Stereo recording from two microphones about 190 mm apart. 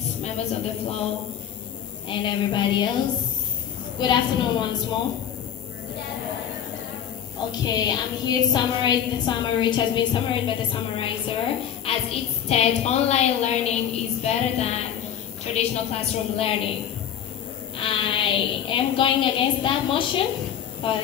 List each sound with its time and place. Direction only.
0.2 s a woman's voice: 35° left (ahead or behind)
2.0 s a woman's voice: 25° left (ahead or behind)
4.0 s a woman's voice: 25° left (ahead or behind)
7.6 s a woman's voice: 20° left (ahead or behind)
17.7 s a woman's voice: 25° left (ahead or behind)